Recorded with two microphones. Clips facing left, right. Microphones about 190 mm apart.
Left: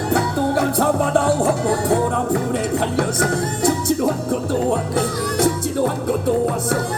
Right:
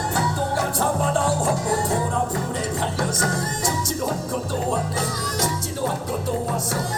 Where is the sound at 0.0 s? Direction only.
60° left (ahead or behind).